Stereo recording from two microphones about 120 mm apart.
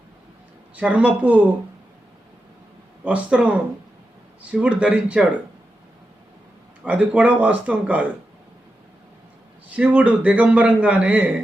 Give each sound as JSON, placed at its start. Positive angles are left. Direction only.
{"t": 0.8, "sound": "a man's voice", "side_deg": -10}
{"t": 3.0, "sound": "a man's voice", "side_deg": -10}
{"t": 6.8, "sound": "a man's voice", "side_deg": -10}
{"t": 9.6, "sound": "a man's voice", "side_deg": -10}